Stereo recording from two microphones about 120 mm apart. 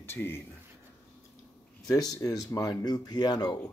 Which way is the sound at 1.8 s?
30° left (ahead or behind).